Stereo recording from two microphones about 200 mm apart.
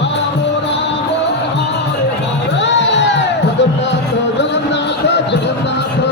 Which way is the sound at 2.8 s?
65° left (ahead or behind).